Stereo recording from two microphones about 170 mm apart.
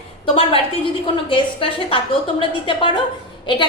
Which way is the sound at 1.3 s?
30° left (ahead or behind).